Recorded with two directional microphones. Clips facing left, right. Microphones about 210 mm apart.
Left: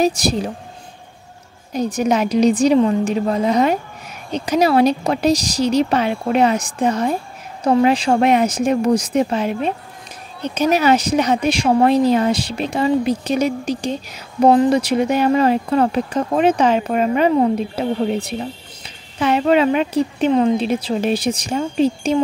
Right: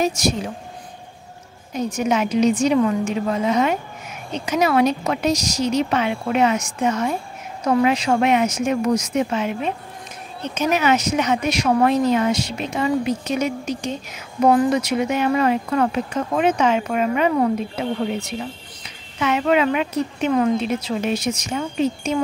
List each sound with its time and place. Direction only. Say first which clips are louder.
0.0 s speech: left 3 dB; 35° left (ahead or behind)
1.7 s speech: left 3 dB; 35° left (ahead or behind)